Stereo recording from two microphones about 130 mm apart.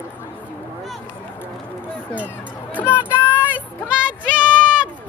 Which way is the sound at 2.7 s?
15° left (ahead or behind).